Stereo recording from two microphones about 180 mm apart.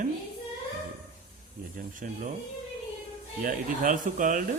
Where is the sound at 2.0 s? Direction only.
55° right (ahead or behind).